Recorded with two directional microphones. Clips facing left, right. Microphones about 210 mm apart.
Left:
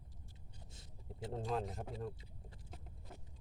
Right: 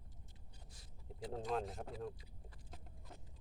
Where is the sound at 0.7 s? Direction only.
25° left (ahead or behind).